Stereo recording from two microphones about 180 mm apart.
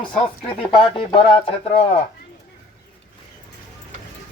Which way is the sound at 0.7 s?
30° left (ahead or behind).